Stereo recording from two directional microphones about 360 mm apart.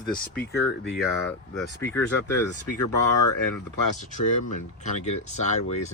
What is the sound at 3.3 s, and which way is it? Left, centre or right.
Speech, left.